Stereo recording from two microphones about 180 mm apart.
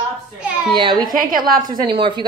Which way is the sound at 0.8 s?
25° right (ahead or behind).